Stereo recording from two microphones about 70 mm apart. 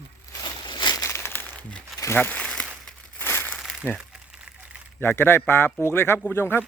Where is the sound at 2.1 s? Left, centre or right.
Left.